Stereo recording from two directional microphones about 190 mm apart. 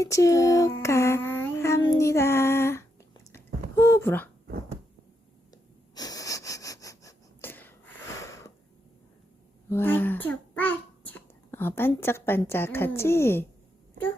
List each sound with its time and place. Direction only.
0.0 s music: 15° left (ahead or behind)
3.3 s a sound: 15° left (ahead or behind)
5.9 s wheeze: 20° left (ahead or behind)
9.6 s a child's voice: 10° left (ahead or behind)